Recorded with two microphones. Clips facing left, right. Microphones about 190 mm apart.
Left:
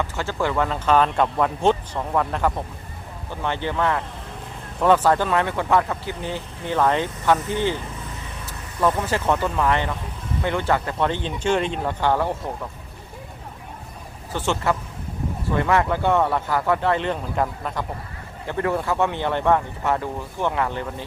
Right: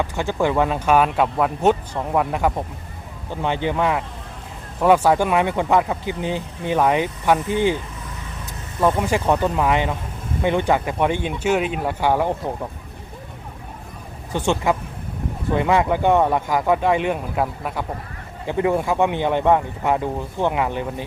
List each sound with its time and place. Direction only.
0.0 s speech: 15° right (ahead or behind)
9.0 s speech: 15° right (ahead or behind)
14.3 s speech: 15° right (ahead or behind)